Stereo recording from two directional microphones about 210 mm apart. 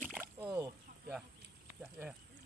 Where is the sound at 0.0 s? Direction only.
10° right (ahead or behind).